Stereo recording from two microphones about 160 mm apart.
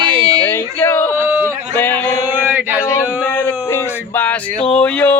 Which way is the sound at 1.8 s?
10° left (ahead or behind).